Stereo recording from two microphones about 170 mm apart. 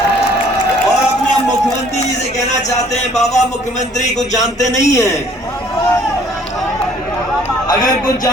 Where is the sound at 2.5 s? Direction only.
40° left (ahead or behind).